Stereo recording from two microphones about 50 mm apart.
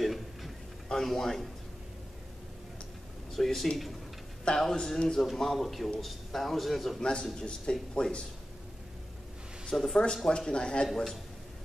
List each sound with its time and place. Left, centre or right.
0.0 s a sound: centre
0.8 s speech: centre
3.3 s a man's voice: centre
4.5 s a man's voice: centre
7.0 s speech: centre
9.7 s speech: centre
10.1 s speech: centre